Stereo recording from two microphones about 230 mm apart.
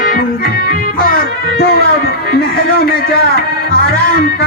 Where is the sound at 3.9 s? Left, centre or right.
Left.